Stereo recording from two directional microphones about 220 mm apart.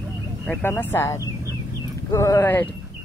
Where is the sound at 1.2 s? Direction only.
15° right (ahead or behind).